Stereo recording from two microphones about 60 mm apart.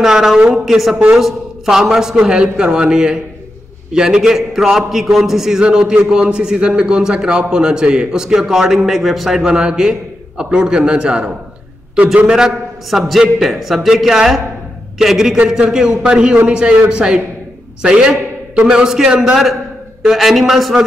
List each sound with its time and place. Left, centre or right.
0.0 s a man's voice: centre
9.5 s a man's voice: centre
15.3 s a man's voice: centre